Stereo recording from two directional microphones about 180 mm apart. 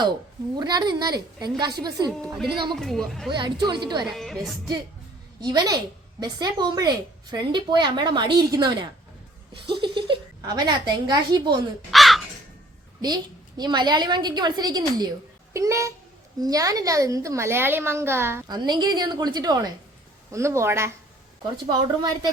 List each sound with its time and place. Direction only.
0.5 s a woman's voice: 25° right (ahead or behind)
2.0 s speech: centre (ahead or behind)
3.2 s a woman's voice: 25° right (ahead or behind)
4.0 s speech: centre (ahead or behind)
5.4 s a woman's voice: 20° right (ahead or behind)
11.9 s crow: centre (ahead or behind)
13.0 s a woman's voice: 25° right (ahead or behind)